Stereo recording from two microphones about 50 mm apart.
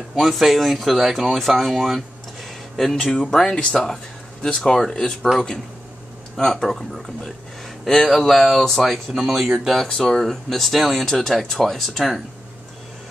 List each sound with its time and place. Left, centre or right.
0.1 s speech: centre
6.3 s speech: centre
9.1 s speech: centre
9.8 s speech: centre
10.2 s speech: centre